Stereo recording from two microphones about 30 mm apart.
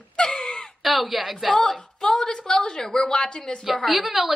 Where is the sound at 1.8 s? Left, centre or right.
Left.